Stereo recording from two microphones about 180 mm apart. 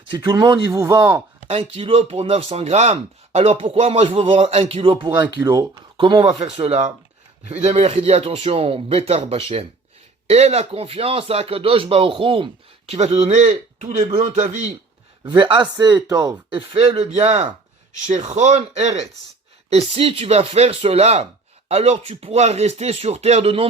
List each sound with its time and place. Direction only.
0.1 s speech: 25° right (ahead or behind)
1.5 s speech: 30° right (ahead or behind)
15.2 s speech: 25° right (ahead or behind)